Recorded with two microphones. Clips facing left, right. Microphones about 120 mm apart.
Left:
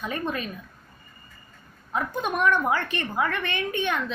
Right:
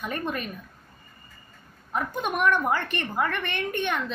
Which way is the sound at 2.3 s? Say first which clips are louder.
Left 1 dB; 15° right (ahead or behind).